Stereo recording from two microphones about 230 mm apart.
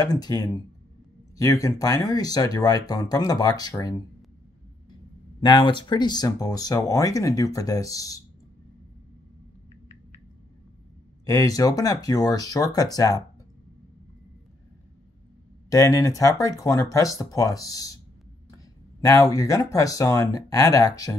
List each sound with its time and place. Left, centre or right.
0.0 s speech: centre
5.4 s speech: centre
11.2 s speech: centre
15.7 s speech: centre
18.9 s speech: centre